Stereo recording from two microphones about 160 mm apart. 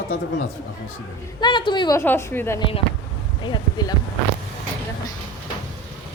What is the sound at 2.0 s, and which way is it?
Speech, 15° left (ahead or behind).